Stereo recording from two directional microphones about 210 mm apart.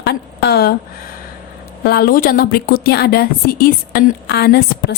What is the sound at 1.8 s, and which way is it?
A woman's voice, 50° left (ahead or behind).